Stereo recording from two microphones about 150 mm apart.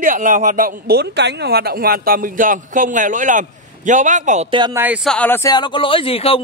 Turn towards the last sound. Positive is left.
turn(degrees=40)  # may be behind; listen again after turning